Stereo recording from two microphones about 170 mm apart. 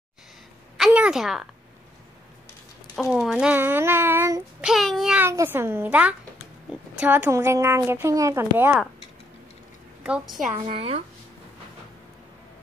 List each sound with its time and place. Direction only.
0.7 s a sound: 5° right (ahead or behind)
3.0 s speech: centre (ahead or behind)
4.6 s child singing: centre (ahead or behind)
5.2 s speech: 15° right (ahead or behind)
10.0 s child singing: 5° right (ahead or behind)
10.7 s speech: 35° right (ahead or behind)